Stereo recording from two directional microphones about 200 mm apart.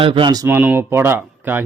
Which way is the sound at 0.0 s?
25° right (ahead or behind).